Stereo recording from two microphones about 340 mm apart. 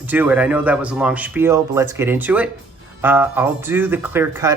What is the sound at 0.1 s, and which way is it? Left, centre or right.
Speech, centre.